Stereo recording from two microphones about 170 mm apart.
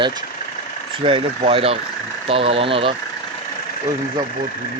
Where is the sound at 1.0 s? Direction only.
30° right (ahead or behind).